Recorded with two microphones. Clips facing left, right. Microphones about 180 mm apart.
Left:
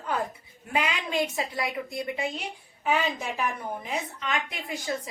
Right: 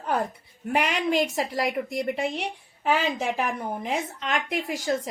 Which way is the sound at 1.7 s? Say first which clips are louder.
Right 5 dB; 70° right (ahead or behind).